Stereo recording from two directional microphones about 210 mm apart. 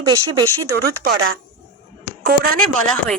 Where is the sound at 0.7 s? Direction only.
45° right (ahead or behind).